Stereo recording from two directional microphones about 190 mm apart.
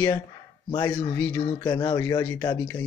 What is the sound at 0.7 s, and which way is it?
Speech, 25° left (ahead or behind).